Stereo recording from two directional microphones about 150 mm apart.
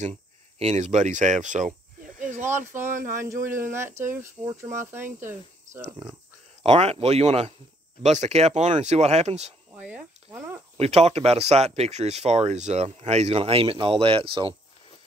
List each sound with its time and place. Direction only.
0.0 s speech: 45° right (ahead or behind)
3.1 s speech: 15° right (ahead or behind)
6.6 s speech: 45° right (ahead or behind)
9.8 s a sound: 10° right (ahead or behind)
10.3 s cricket: 15° right (ahead or behind)
10.8 s speech: 45° right (ahead or behind)